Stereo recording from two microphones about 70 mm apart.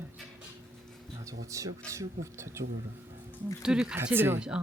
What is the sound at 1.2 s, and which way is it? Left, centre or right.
Speech, right.